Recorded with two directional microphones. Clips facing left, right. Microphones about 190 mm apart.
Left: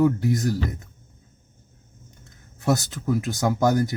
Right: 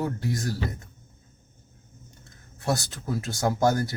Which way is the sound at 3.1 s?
15° left (ahead or behind).